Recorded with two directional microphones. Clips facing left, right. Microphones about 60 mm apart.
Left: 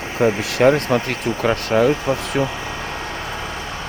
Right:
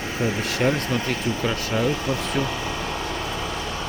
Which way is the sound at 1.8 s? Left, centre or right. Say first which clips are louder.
Left 6 dB; left.